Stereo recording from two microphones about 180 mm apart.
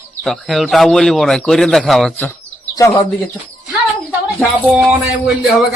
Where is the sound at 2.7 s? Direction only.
20° left (ahead or behind).